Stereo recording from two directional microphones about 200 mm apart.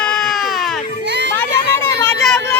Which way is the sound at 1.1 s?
60° right (ahead or behind).